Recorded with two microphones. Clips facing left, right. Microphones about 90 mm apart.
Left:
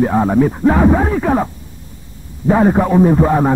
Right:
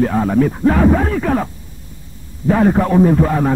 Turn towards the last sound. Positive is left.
turn(degrees=20)  # may be behind; listen again after turning